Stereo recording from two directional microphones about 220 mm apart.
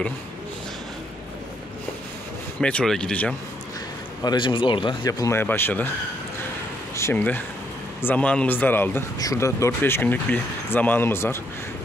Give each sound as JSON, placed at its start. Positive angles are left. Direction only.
{"t": 2.6, "sound": "speech", "side_deg": 5}
{"t": 4.2, "sound": "speech", "side_deg": 20}
{"t": 7.0, "sound": "speech", "side_deg": 10}